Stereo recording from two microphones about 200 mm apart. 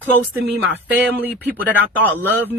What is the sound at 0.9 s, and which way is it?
Speech, 10° right (ahead or behind).